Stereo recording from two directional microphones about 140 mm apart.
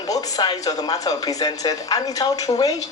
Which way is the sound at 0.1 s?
25° left (ahead or behind).